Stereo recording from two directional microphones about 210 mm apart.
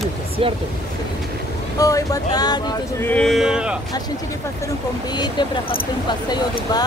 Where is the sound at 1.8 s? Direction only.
15° left (ahead or behind).